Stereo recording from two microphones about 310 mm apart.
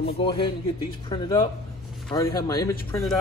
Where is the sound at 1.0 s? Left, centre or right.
Centre.